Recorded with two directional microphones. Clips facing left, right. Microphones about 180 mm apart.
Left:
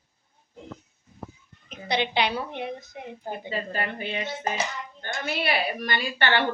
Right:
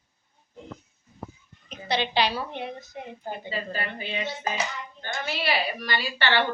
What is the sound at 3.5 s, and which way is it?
A woman's voice, 50° left (ahead or behind).